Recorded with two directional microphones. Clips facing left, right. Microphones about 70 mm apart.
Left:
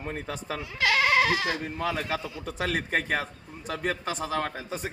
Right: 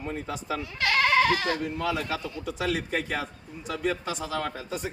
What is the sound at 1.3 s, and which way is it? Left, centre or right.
A man's voice, left.